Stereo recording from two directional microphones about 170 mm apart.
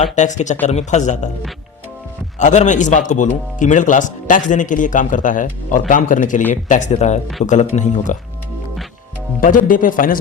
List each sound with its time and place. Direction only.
0.0 s speech: 45° left (ahead or behind)
2.4 s speech: 45° left (ahead or behind)
9.4 s speech: 55° left (ahead or behind)